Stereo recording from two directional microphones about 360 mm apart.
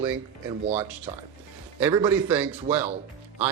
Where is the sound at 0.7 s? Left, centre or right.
Centre.